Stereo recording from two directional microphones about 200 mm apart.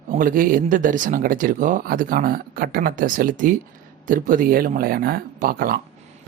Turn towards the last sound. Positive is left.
turn(degrees=-45)  # may be behind; listen again after turning